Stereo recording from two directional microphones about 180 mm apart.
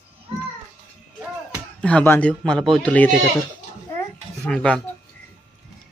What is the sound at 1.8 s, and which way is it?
A man's voice, 5° left (ahead or behind).